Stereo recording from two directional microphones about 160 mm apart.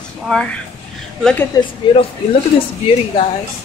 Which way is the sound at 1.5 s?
25° left (ahead or behind).